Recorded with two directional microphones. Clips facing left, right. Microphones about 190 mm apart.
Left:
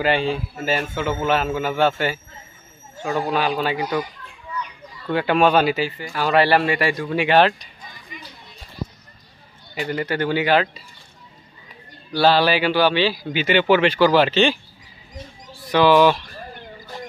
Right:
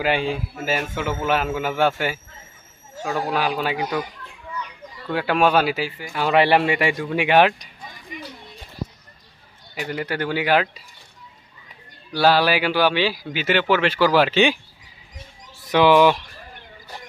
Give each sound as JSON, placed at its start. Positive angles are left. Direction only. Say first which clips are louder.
{"t": 0.0, "sound": "a man's voice", "louder": "left 2 dB", "side_deg": -10}
{"t": 5.1, "sound": "a man's voice", "louder": "left 2 dB", "side_deg": -5}
{"t": 6.1, "sound": "a man's voice", "louder": "even", "side_deg": -20}
{"t": 9.8, "sound": "a man's voice", "louder": "left 3 dB", "side_deg": -5}
{"t": 12.1, "sound": "a man's voice", "louder": "left 1 dB", "side_deg": -10}
{"t": 15.7, "sound": "a man's voice", "louder": "even", "side_deg": -15}